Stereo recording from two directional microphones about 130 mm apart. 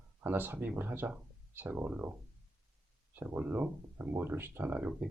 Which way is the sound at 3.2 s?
15° right (ahead or behind).